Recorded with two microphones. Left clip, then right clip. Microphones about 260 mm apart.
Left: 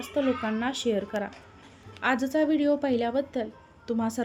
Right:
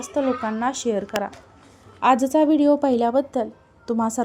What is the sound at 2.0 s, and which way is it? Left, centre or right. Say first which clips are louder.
A woman's voice: right 8 dB; right.